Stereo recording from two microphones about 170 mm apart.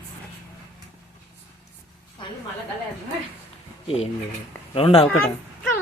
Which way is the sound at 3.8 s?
35° left (ahead or behind).